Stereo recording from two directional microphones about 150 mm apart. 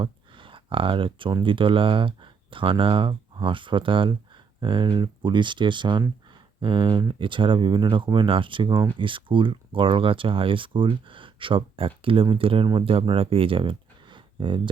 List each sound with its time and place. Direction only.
0.0 s speech: 35° right (ahead or behind)